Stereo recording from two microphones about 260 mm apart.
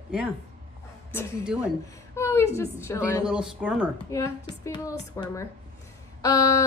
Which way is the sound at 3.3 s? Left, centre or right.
Centre.